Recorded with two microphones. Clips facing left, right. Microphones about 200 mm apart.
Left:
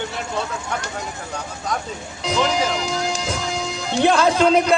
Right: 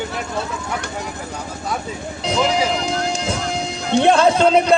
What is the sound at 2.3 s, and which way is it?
Music, 35° right (ahead or behind).